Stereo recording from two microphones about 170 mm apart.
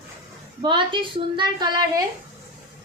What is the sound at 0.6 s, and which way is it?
A woman's voice, 30° right (ahead or behind).